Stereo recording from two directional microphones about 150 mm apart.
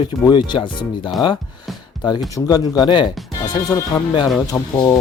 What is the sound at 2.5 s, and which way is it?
Speech, 25° left (ahead or behind).